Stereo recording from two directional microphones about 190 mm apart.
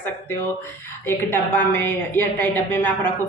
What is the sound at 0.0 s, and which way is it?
Speech, 10° left (ahead or behind).